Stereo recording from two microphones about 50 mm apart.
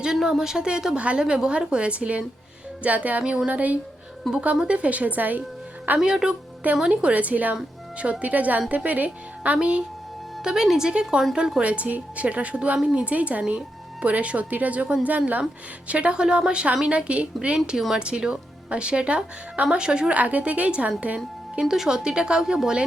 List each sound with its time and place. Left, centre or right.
0.0 s a woman's voice: centre; by 3.8 s right
4.3 s speech: centre
4.7 s a woman's voice: right
6.0 s a woman's voice: centre
6.9 s a woman's voice: right
10.4 s speech: centre
11.6 s speech: right
13.1 s a woman's voice: right
17.7 s speech: centre
18.0 s speech: centre
21.6 s speech: centre